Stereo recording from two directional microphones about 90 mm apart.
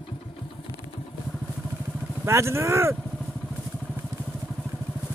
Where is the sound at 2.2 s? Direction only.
30° right (ahead or behind).